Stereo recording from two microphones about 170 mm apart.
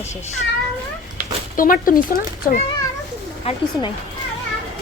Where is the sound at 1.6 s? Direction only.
55° left (ahead or behind).